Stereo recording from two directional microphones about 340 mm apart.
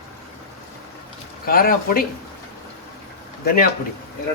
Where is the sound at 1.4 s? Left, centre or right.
Left.